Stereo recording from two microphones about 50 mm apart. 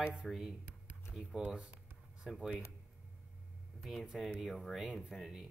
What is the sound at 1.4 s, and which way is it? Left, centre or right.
Speech, right.